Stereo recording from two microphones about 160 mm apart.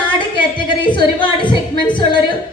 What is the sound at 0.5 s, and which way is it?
Speech, 30° left (ahead or behind).